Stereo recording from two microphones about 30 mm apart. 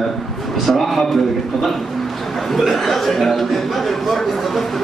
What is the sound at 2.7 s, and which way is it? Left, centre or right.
Speech, centre.